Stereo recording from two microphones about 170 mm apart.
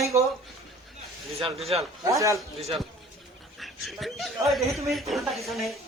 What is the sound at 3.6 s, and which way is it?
A woman's voice, centre (ahead or behind).